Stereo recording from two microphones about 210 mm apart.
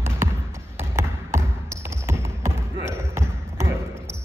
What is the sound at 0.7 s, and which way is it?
Tap, 15° right (ahead or behind).